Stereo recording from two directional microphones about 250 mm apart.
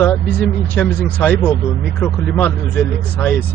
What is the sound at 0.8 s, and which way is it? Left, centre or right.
Speech, centre.